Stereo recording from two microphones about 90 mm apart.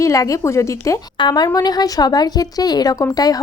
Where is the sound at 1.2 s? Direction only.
50° left (ahead or behind).